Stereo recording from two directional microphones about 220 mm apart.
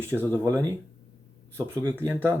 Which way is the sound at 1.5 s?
15° right (ahead or behind).